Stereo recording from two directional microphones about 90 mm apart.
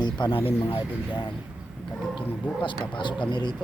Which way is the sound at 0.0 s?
65° left (ahead or behind).